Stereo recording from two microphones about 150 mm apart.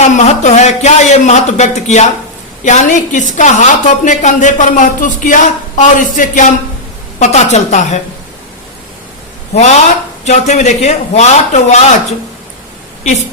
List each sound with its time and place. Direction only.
0.0 s a woman's voice: 50° left (ahead or behind)
9.6 s speech: 50° left (ahead or behind)